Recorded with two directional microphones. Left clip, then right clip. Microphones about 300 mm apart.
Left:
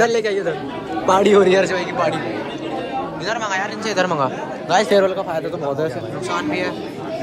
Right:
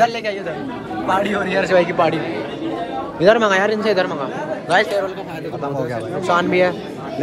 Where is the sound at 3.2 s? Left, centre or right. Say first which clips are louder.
Right 11 dB; centre.